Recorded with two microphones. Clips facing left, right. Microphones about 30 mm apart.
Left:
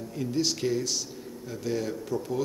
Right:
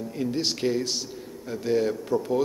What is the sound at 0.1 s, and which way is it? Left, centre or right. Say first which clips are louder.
A man's voice: even; centre.